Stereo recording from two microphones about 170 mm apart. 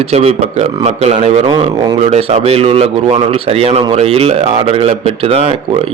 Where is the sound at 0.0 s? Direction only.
35° right (ahead or behind).